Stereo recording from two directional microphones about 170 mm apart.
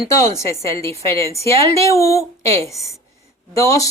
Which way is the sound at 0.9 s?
35° right (ahead or behind).